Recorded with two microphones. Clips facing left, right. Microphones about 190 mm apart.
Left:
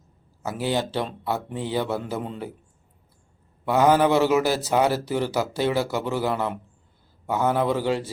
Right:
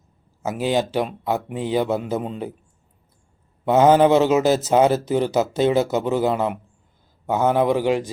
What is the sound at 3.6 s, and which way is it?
A man's voice, 20° right (ahead or behind).